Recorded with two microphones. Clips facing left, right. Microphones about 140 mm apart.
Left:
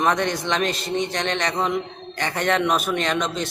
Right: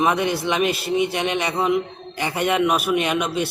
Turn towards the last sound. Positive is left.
turn(degrees=-10)  # may be behind; listen again after turning